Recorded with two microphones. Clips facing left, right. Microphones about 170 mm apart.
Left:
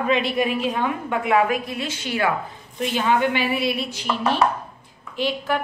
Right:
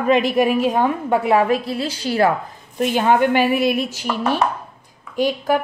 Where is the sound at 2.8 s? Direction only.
50° right (ahead or behind).